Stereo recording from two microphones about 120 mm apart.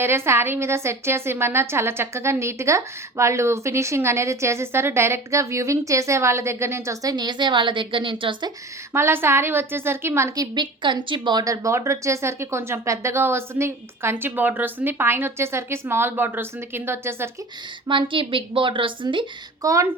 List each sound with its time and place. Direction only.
0.0 s a woman's voice: 20° right (ahead or behind); by 8.5 s 40° right (ahead or behind)
8.9 s a woman's voice: 20° right (ahead or behind)
17.8 s a woman's voice: 45° right (ahead or behind)
19.6 s a woman's voice: 25° right (ahead or behind)